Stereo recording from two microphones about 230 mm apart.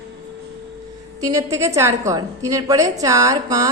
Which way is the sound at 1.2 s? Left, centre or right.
Centre.